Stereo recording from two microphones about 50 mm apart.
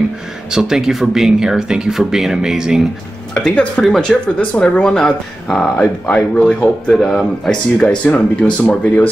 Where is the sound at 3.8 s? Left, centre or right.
Centre.